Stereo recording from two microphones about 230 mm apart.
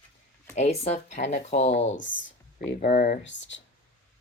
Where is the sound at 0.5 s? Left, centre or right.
Left.